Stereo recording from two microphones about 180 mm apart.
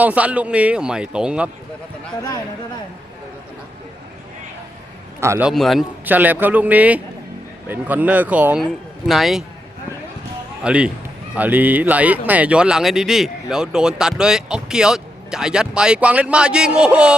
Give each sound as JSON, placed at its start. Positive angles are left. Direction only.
{"t": 0.0, "sound": "speech", "side_deg": -10}
{"t": 5.2, "sound": "speech", "side_deg": -15}
{"t": 5.5, "sound": "speech", "side_deg": 0}
{"t": 10.6, "sound": "speech", "side_deg": -5}